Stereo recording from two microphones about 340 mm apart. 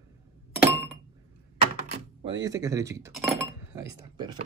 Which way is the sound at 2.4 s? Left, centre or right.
Centre.